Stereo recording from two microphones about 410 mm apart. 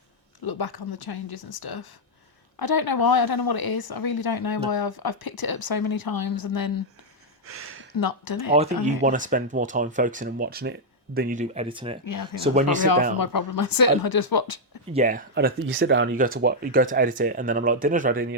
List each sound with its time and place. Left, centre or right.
0.4 s speech: left
7.4 s a sound: right
7.9 s speech: left
8.8 s speech: centre
12.0 s speech: left
14.9 s speech: centre